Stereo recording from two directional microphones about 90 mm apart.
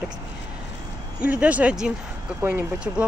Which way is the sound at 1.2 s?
15° right (ahead or behind).